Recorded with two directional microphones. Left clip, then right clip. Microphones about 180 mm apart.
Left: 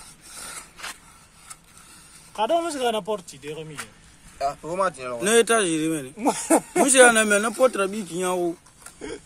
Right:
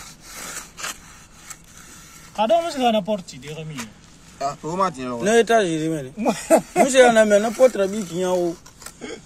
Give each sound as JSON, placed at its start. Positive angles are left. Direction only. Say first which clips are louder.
{"t": 0.4, "sound": "a sound", "louder": "right 5 dB", "side_deg": 0}
{"t": 2.3, "sound": "speech", "louder": "right 4 dB", "side_deg": 65}
{"t": 4.4, "sound": "speech", "louder": "right 2 dB", "side_deg": 35}
{"t": 6.1, "sound": "speech", "louder": "right 4 dB", "side_deg": 70}
{"t": 6.8, "sound": "speech", "louder": "right 1 dB", "side_deg": 30}